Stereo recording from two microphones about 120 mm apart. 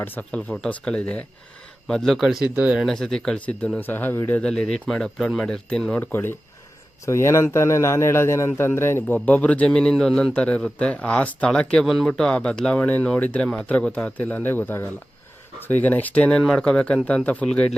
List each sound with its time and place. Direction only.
0.0 s a man's voice: 15° left (ahead or behind); by 2.8 s 10° right (ahead or behind)
2.8 s a man's voice: 5° left (ahead or behind)